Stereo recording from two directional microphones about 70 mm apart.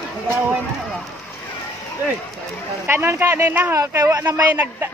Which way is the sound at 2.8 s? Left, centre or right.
Right.